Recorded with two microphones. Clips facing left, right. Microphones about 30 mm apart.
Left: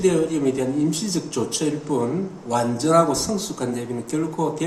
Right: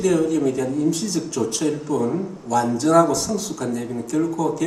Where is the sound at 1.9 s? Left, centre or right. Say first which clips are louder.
Left 1 dB; left.